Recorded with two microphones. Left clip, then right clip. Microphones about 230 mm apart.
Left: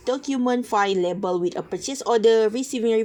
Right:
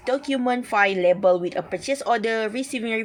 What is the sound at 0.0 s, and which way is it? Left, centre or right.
A woman's voice, centre.